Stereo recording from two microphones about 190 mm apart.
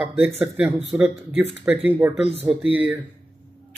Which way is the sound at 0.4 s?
5° right (ahead or behind).